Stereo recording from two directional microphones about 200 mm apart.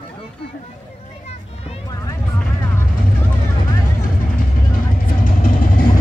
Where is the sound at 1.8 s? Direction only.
20° left (ahead or behind).